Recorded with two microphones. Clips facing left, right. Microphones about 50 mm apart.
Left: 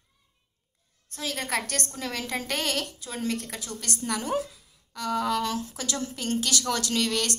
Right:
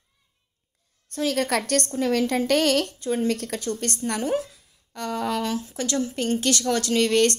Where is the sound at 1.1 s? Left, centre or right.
Right.